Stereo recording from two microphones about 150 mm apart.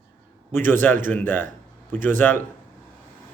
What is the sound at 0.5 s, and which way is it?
A man's voice, 15° left (ahead or behind).